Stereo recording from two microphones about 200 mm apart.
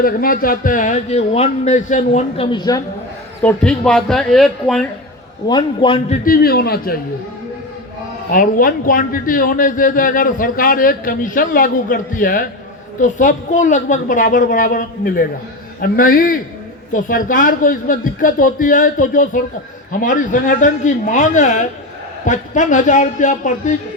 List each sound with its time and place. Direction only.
0.0 s a man's voice: 45° left (ahead or behind)
2.5 s a man's voice: 20° left (ahead or behind)
3.4 s speech: 5° left (ahead or behind)
5.5 s a man's voice: 25° left (ahead or behind)
6.2 s a man's voice: 50° left (ahead or behind)
8.3 s a man's voice: 45° left (ahead or behind)